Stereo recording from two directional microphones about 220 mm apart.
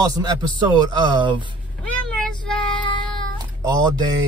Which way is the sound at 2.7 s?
20° left (ahead or behind).